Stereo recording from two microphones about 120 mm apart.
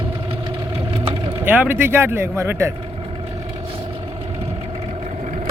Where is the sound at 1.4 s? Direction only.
15° right (ahead or behind).